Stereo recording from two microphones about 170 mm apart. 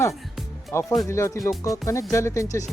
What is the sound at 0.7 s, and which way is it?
Speech, 15° left (ahead or behind).